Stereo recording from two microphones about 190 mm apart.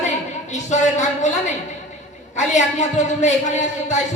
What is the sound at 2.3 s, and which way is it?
Speech, 40° left (ahead or behind).